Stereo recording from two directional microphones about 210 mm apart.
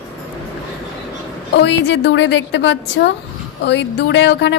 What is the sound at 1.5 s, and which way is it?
A woman's voice, 55° left (ahead or behind).